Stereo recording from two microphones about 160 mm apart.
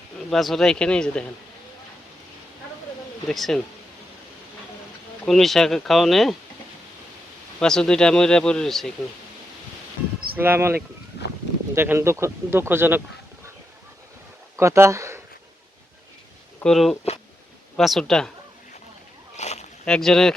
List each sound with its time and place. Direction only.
0.3 s speech: centre (ahead or behind)
3.2 s speech: centre (ahead or behind)
5.2 s speech: centre (ahead or behind)
7.6 s speech: 5° left (ahead or behind)
10.3 s speech: 15° right (ahead or behind)
11.2 s a sound: 90° left
11.7 s speech: 15° right (ahead or behind)
14.5 s speech: 20° right (ahead or behind)
16.6 s speech: centre (ahead or behind)
19.4 s boat: 45° left (ahead or behind)
19.8 s speech: 5° left (ahead or behind)